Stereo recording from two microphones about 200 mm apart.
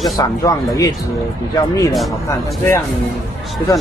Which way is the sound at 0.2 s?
15° left (ahead or behind).